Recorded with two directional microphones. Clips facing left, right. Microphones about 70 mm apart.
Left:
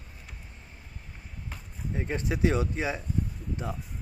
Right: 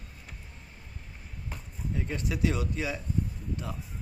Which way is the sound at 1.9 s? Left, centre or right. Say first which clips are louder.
Left 3 dB; left.